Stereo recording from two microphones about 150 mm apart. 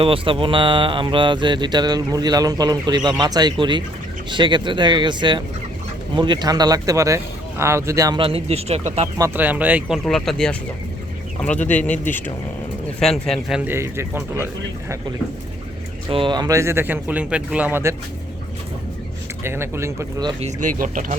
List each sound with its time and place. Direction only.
0.0 s speech: 35° right (ahead or behind)
8.2 s speech: 40° right (ahead or behind)
9.1 s speech: 15° right (ahead or behind)
10.1 s speech: 5° left (ahead or behind)
13.0 s speech: centre (ahead or behind)
13.7 s speech: 15° right (ahead or behind)
16.0 s speech: 35° right (ahead or behind); by 17.9 s 15° right (ahead or behind)
19.4 s speech: 15° right (ahead or behind)
20.4 s speech: 60° right (ahead or behind)